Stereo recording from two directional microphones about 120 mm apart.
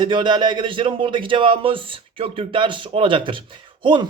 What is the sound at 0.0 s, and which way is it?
Speech, 40° right (ahead or behind).